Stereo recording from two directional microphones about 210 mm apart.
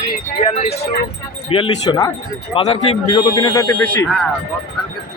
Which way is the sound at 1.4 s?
25° left (ahead or behind).